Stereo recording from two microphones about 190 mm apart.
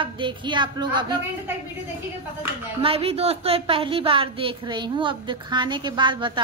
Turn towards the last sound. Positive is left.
turn(degrees=-25)  # may be behind; listen again after turning